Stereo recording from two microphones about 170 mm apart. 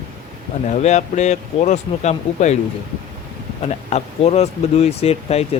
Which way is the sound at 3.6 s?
40° left (ahead or behind).